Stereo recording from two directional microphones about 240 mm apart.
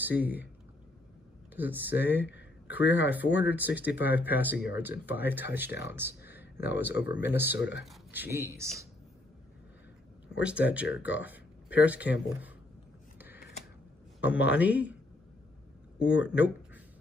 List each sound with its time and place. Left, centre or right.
0.0 s speech: centre
1.5 s speech: centre
3.0 s speech: centre
7.5 s speech: left
7.8 s speech: centre
10.2 s speech: centre
13.2 s a sound: centre
14.2 s speech: centre
16.0 s speech: centre